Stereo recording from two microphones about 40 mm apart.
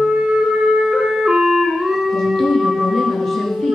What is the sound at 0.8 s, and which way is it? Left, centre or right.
Music, centre.